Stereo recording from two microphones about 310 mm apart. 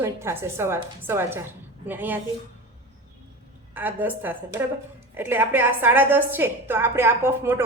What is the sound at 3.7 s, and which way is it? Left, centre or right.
A woman's voice, centre.